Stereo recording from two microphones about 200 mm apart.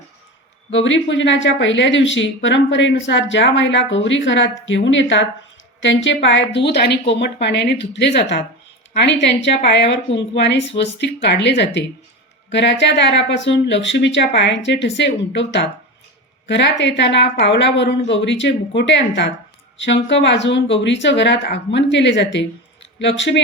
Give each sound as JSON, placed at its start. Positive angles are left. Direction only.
{"t": 0.7, "sound": "speech", "side_deg": 70}